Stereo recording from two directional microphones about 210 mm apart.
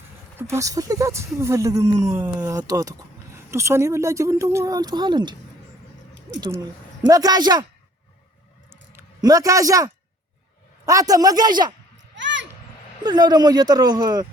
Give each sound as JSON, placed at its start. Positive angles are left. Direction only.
{"t": 0.3, "sound": "speech", "side_deg": -10}
{"t": 7.1, "sound": "speech", "side_deg": -20}
{"t": 8.7, "sound": "a sound", "side_deg": -10}
{"t": 10.8, "sound": "speech", "side_deg": -15}
{"t": 12.1, "sound": "a sound", "side_deg": -60}
{"t": 13.0, "sound": "speech", "side_deg": -20}